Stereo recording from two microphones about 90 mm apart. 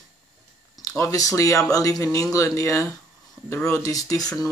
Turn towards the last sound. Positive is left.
turn(degrees=40)  # may be behind; listen again after turning